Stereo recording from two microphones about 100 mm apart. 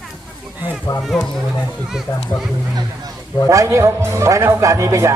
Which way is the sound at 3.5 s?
30° right (ahead or behind).